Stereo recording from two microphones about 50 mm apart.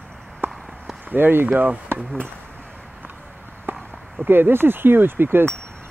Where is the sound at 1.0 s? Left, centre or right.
Right.